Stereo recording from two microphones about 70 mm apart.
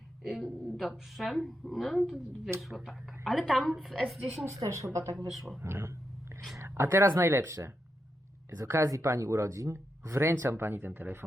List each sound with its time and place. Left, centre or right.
0.2 s a woman's voice: centre
4.4 s speech: right
5.3 s a woman's voice: centre
5.6 s speech: right